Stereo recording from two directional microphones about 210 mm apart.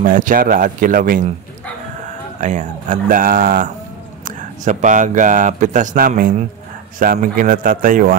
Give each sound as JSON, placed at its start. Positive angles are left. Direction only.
{"t": 0.0, "sound": "speech", "side_deg": -40}
{"t": 2.4, "sound": "speech", "side_deg": -35}